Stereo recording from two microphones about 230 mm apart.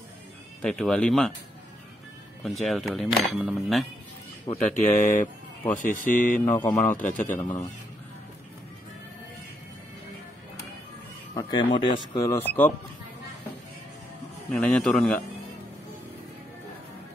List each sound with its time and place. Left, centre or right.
0.6 s speech: centre
2.4 s speech: centre
4.5 s speech: left
6.4 s speech: centre
7.1 s speech: left
7.3 s speech: centre
11.3 s a man's voice: left
14.5 s speech: centre